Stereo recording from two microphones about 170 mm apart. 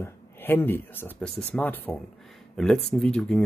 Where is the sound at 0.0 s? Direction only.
10° left (ahead or behind).